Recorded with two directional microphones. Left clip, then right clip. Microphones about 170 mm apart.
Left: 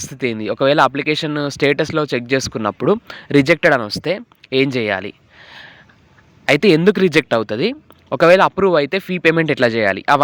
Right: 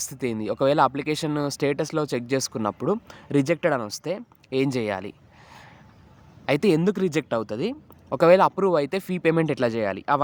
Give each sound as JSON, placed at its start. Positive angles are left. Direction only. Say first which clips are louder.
{"t": 0.1, "sound": "speech", "louder": "left 9 dB", "side_deg": 15}